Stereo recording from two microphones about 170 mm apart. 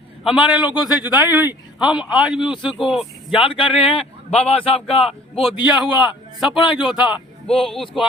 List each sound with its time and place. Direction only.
0.3 s a man's voice: 5° right (ahead or behind)
0.9 s speech: 25° left (ahead or behind)
1.1 s a man's voice: 10° right (ahead or behind)
2.4 s speech: 30° left (ahead or behind)
2.6 s speech: centre (ahead or behind)
3.3 s speech: 30° left (ahead or behind)
5.0 s a man's voice: centre (ahead or behind)